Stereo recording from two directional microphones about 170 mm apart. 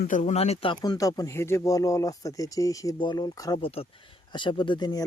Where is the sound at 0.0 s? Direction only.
45° left (ahead or behind); by 3.6 s 20° left (ahead or behind).